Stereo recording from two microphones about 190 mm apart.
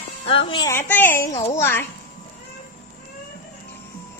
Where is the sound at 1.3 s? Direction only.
35° left (ahead or behind).